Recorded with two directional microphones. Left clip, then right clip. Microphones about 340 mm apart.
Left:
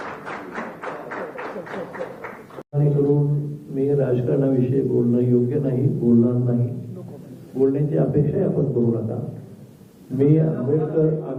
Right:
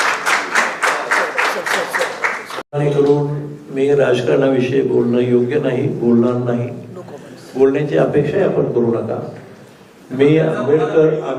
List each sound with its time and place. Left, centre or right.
0.0 s applause: centre
3.1 s a man's voice: centre